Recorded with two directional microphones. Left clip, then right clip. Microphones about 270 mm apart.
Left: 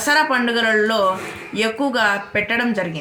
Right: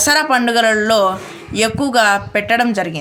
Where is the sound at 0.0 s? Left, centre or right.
Right.